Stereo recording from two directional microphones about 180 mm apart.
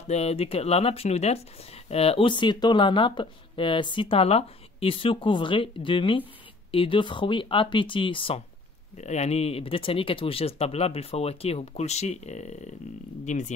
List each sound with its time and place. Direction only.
0.1 s speech: 35° left (ahead or behind)